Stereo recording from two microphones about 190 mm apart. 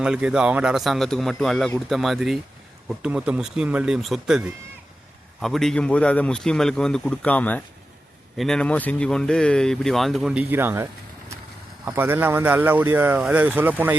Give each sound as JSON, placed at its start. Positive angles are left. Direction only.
{"t": 0.0, "sound": "speech", "side_deg": -5}
{"t": 11.9, "sound": "speech", "side_deg": -10}